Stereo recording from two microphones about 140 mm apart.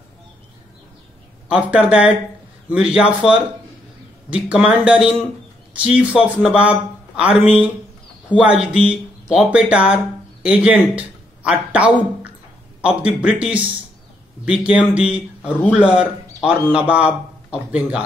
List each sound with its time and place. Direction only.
1.5 s speech: 10° right (ahead or behind)